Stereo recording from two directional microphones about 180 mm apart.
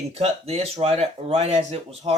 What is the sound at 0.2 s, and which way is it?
Speech, 35° right (ahead or behind).